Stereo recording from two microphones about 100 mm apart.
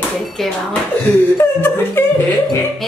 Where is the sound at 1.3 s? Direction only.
20° left (ahead or behind).